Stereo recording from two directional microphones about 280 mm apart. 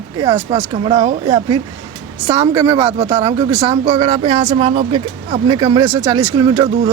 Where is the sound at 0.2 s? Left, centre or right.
Centre.